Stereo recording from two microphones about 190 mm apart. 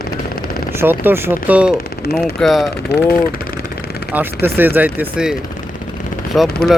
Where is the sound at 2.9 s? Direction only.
60° left (ahead or behind).